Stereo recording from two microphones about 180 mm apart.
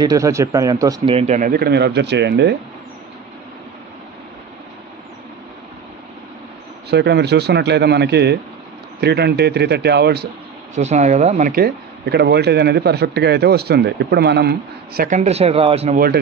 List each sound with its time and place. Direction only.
0.0 s speech: 20° right (ahead or behind)
1.1 s speech: 40° right (ahead or behind); by 2.5 s 70° right (ahead or behind)
6.9 s speech: 70° right (ahead or behind)
10.7 s speech: 40° right (ahead or behind); by 15.0 s 60° right (ahead or behind)
15.0 s speech: 40° right (ahead or behind)